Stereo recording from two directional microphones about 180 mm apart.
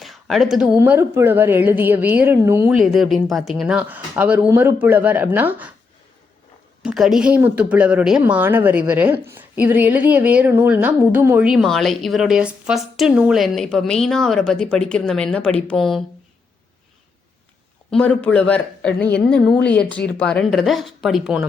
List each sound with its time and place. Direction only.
0.0 s speech: centre (ahead or behind)
2.7 s speech: centre (ahead or behind)
6.8 s speech: centre (ahead or behind)
17.9 s speech: 5° left (ahead or behind)